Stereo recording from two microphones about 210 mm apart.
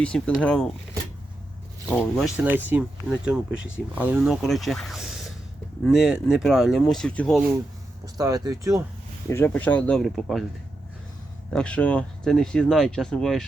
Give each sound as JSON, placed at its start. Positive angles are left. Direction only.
{"t": 0.0, "sound": "speech", "side_deg": 5}
{"t": 1.9, "sound": "speech", "side_deg": 5}
{"t": 3.2, "sound": "speech", "side_deg": -5}
{"t": 8.0, "sound": "speech", "side_deg": -15}
{"t": 9.3, "sound": "speech", "side_deg": 10}
{"t": 11.5, "sound": "speech", "side_deg": 5}